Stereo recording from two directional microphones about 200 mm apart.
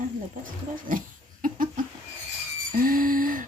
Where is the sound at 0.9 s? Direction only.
45° right (ahead or behind).